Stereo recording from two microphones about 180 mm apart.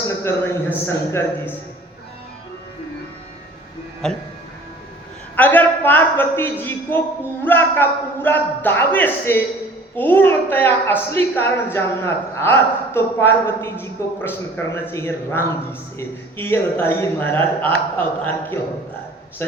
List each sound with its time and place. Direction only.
0.1 s a sound: 15° left (ahead or behind)
0.9 s a woman's voice: 15° left (ahead or behind)
4.0 s speech: 5° left (ahead or behind)
5.4 s a woman's voice: 10° left (ahead or behind)